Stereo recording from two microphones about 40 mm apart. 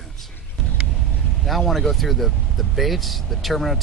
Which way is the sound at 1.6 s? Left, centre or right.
Centre.